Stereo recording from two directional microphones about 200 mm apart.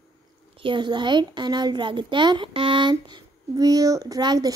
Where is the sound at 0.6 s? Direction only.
25° right (ahead or behind).